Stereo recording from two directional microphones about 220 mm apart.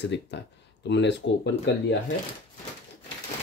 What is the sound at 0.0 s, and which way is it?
Speech, 50° left (ahead or behind).